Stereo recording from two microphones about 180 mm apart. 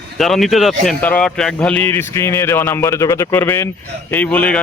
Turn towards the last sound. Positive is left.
turn(degrees=10)  # may be behind; listen again after turning